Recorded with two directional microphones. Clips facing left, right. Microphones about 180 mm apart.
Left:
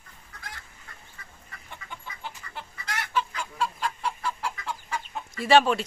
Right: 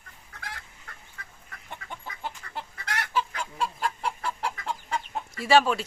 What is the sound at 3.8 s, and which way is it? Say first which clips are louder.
Chicken: even; 55° right (ahead or behind).